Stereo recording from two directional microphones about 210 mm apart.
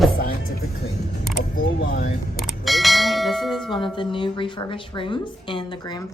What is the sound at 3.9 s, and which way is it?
A woman's voice, 25° left (ahead or behind).